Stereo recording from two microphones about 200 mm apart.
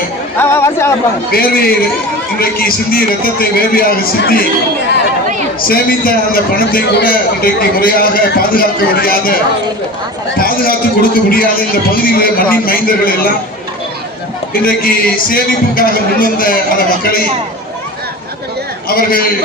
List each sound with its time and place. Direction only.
0.3 s a sound: 10° left (ahead or behind)
1.3 s a man's voice: 50° left (ahead or behind)
5.6 s a man's voice: 50° left (ahead or behind)
14.6 s a man's voice: 45° left (ahead or behind)
18.9 s a man's voice: 50° left (ahead or behind)